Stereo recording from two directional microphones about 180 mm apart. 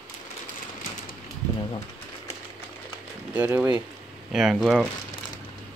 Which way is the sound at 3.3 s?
10° right (ahead or behind).